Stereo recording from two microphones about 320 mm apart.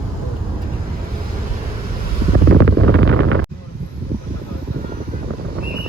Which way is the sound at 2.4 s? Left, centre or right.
Right.